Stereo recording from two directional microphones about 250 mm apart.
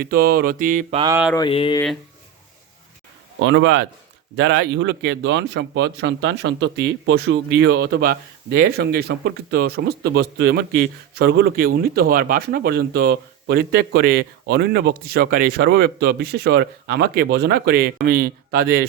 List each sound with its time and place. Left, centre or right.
0.0 s speech: right
1.4 s speech: left
3.4 s a man's voice: right